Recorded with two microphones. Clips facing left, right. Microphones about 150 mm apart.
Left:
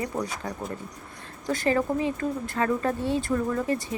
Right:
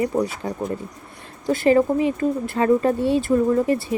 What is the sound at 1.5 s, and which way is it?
Speech, 20° right (ahead or behind).